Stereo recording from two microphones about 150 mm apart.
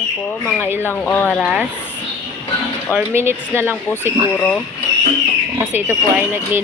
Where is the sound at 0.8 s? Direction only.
10° left (ahead or behind).